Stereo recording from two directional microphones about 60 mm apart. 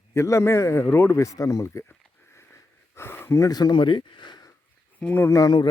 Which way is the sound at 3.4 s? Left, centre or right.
Left.